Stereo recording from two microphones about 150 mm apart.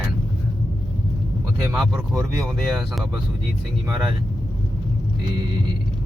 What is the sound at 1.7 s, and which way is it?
Speech, centre (ahead or behind).